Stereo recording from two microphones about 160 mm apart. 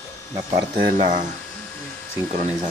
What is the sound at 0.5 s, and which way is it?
Speech, 50° right (ahead or behind).